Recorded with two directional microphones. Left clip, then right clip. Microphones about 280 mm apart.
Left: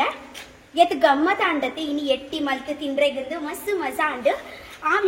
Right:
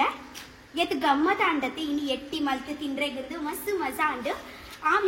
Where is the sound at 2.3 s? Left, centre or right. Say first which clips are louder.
Left 4 dB; centre.